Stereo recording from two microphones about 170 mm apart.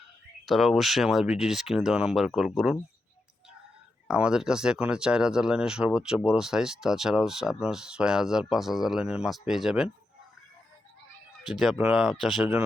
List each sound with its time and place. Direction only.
0.4 s speech: centre (ahead or behind)
4.1 s speech: 5° right (ahead or behind)
11.9 s speech: 5° right (ahead or behind)